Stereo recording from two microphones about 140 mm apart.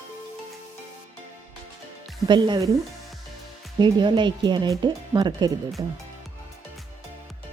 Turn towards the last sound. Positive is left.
turn(degrees=-30)  # may be behind; listen again after turning